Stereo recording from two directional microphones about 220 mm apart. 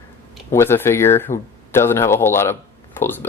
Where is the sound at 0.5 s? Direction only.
10° left (ahead or behind).